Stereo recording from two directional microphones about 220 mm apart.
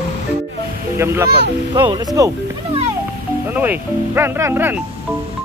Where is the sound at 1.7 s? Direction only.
20° right (ahead or behind).